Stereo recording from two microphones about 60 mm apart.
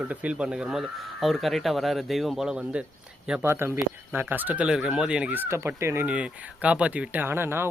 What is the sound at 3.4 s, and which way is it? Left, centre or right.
Speech, right.